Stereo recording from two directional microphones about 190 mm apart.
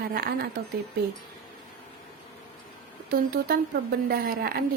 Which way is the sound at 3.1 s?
55° right (ahead or behind).